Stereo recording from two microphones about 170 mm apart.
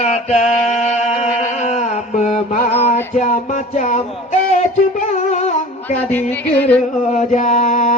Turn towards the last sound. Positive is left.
turn(degrees=40)  # may be behind; listen again after turning